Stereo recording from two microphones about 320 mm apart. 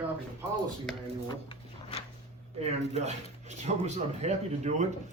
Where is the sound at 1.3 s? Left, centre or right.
Centre.